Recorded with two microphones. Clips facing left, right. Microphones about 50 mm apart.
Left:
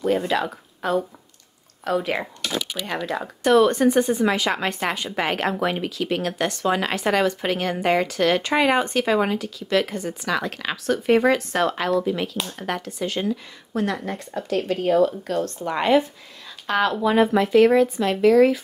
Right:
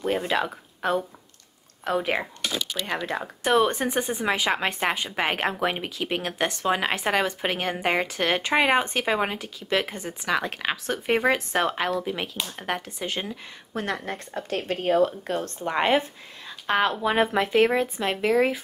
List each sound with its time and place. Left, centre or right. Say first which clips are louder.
0.3 s speech: left 2 dB; right
2.8 s speech: left 2 dB; centre
13.7 s speech: left 4 dB; right